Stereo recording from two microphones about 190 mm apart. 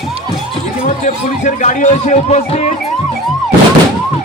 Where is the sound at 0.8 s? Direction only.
40° left (ahead or behind).